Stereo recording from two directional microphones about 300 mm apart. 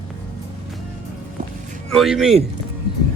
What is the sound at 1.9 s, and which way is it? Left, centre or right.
Speech, centre.